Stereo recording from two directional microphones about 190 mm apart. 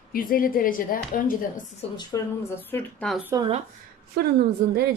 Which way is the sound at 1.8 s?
30° left (ahead or behind).